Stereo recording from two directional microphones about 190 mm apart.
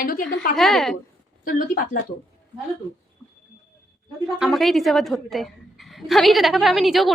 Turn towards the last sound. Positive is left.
turn(degrees=0)  # may be behind; listen again after turning